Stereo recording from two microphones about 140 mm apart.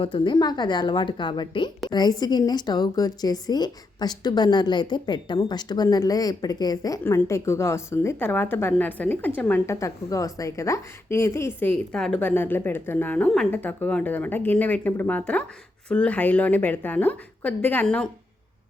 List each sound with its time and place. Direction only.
0.0 s a woman's voice: 35° left (ahead or behind); by 9.7 s 10° left (ahead or behind)
9.7 s a woman's voice: 25° left (ahead or behind); by 18.1 s 10° left (ahead or behind)